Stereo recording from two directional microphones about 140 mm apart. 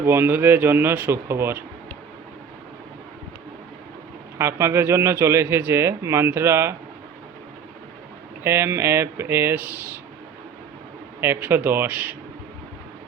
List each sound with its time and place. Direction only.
0.0 s speech: 15° right (ahead or behind)
4.4 s a man's voice: 20° right (ahead or behind)
8.4 s speech: 20° right (ahead or behind)
11.2 s speech: 15° right (ahead or behind)